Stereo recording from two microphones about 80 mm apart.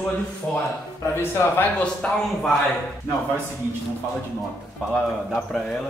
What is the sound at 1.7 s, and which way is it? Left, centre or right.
Speech, centre.